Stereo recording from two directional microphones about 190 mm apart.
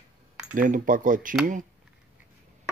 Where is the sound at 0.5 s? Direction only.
45° right (ahead or behind).